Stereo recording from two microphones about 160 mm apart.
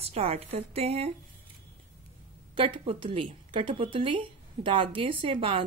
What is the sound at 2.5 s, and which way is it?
A woman's voice, 35° right (ahead or behind).